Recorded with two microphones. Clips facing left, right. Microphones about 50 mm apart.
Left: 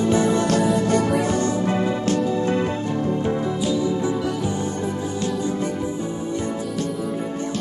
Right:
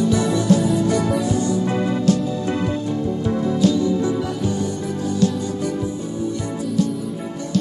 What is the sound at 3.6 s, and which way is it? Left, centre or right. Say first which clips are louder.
Music: right 7 dB; centre.